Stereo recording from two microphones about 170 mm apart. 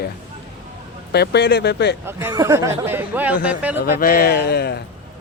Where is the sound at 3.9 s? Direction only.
60° left (ahead or behind).